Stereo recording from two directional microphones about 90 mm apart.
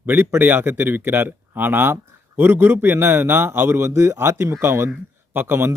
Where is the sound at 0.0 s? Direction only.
20° right (ahead or behind).